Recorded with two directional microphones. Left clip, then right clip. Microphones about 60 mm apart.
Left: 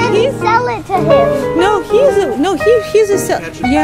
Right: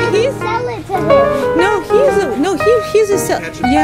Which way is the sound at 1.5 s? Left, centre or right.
Centre.